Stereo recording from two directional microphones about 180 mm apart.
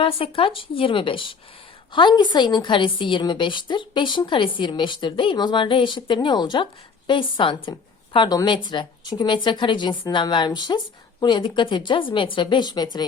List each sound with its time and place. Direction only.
0.0 s a woman's voice: 30° left (ahead or behind)